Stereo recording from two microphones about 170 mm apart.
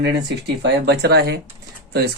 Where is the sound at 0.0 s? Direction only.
85° right.